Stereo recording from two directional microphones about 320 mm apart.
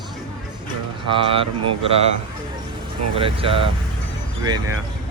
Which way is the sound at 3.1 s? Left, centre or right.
Centre.